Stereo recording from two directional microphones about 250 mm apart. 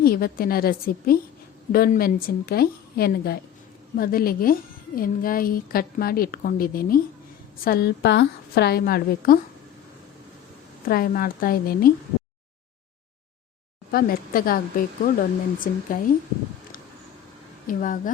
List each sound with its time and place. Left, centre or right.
0.0 s a woman's voice: left
10.8 s a woman's voice: left
13.9 s a woman's voice: left
17.7 s a woman's voice: left